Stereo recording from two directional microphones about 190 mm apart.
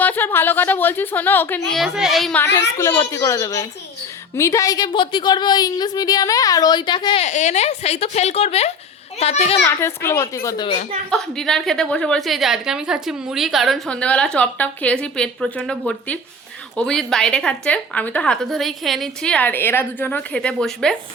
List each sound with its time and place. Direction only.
0.0 s a woman's voice: 10° left (ahead or behind)
1.7 s a woman's voice: centre (ahead or behind)
2.6 s a woman's voice: 15° left (ahead or behind); by 9.6 s 35° left (ahead or behind)
9.8 s a woman's voice: 15° left (ahead or behind)
11.1 s a woman's voice: 5° left (ahead or behind)